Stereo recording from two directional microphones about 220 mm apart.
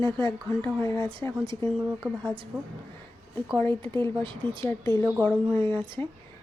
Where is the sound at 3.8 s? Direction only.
20° right (ahead or behind).